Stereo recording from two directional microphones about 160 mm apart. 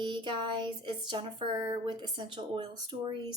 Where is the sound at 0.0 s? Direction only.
30° right (ahead or behind).